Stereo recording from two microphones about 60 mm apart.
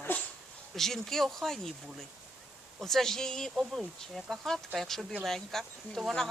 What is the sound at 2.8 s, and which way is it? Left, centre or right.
Speech, centre.